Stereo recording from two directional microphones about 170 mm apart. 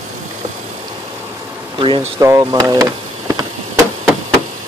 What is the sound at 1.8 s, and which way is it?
Speech, 30° right (ahead or behind).